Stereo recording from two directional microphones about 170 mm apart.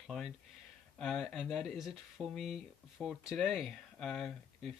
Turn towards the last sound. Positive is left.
turn(degrees=5)  # may be behind; listen again after turning